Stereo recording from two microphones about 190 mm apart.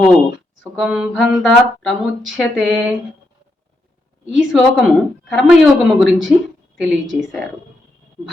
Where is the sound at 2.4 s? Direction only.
Centre (ahead or behind).